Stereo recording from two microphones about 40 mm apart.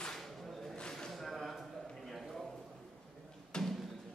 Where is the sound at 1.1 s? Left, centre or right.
Centre.